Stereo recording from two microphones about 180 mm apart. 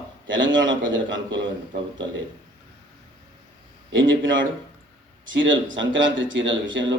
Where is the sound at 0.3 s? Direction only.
90° right.